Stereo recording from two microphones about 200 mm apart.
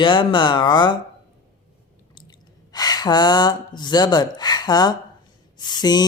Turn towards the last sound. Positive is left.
turn(degrees=20)  # may be behind; listen again after turning